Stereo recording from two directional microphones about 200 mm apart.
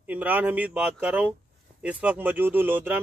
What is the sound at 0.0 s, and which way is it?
A man's voice, 10° right (ahead or behind).